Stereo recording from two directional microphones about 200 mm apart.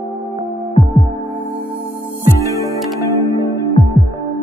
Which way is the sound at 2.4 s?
15° left (ahead or behind).